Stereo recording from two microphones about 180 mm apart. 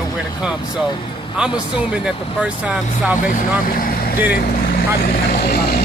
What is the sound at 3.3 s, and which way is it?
Speech, 50° left (ahead or behind).